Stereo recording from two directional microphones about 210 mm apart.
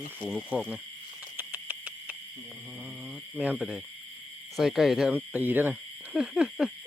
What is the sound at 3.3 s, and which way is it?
Speech, 5° right (ahead or behind).